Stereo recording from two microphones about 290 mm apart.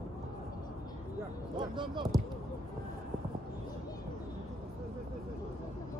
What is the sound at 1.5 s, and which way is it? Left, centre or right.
Speech, centre.